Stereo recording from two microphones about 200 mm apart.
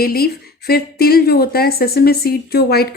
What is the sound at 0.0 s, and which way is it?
Speech, 50° left (ahead or behind).